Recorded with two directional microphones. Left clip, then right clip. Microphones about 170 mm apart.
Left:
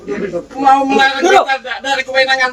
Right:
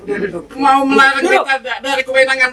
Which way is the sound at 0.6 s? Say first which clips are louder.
Even; 65° right (ahead or behind).